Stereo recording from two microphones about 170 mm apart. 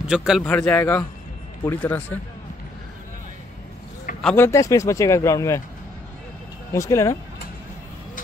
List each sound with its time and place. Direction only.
0.1 s a man's voice: 5° right (ahead or behind)
0.4 s speech: 10° left (ahead or behind)
4.2 s speech: 5° left (ahead or behind)
4.5 s speech: 20° left (ahead or behind)
6.7 s speech: 15° left (ahead or behind)